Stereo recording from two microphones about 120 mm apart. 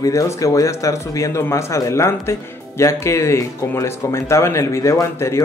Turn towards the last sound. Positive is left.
turn(degrees=25)  # may be behind; listen again after turning